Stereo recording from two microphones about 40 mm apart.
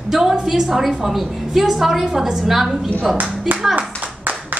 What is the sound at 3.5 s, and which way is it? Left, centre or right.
Speech, right.